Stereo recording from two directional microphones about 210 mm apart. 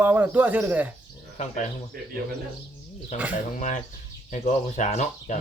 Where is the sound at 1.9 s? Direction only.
45° right (ahead or behind).